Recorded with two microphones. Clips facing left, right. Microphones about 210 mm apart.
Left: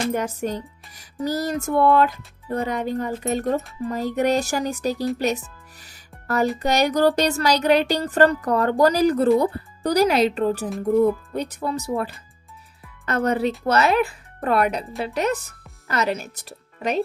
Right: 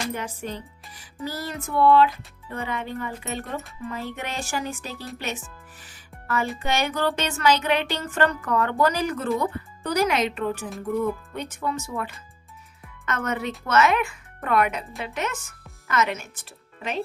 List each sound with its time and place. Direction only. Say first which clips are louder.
0.1 s a woman's voice: left 7 dB; 40° left (ahead or behind)
5.1 s music: left 9 dB; 40° left (ahead or behind)
6.6 s a woman's voice: left 8 dB; 40° left (ahead or behind)